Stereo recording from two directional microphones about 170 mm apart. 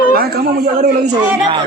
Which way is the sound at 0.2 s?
65° right (ahead or behind).